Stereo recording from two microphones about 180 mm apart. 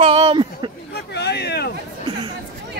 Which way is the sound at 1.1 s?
65° left (ahead or behind).